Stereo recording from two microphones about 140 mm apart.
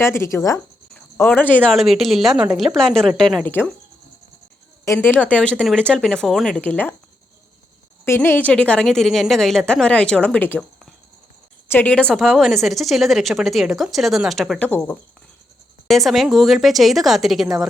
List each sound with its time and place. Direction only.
0.0 s speech: 20° left (ahead or behind)
0.9 s cricket: 5° left (ahead or behind)
1.6 s a woman's voice: centre (ahead or behind)
3.4 s a woman's voice: 15° left (ahead or behind)
4.9 s a woman's voice: 15° left (ahead or behind)
8.0 s a woman's voice: 15° left (ahead or behind); by 17.7 s 5° right (ahead or behind)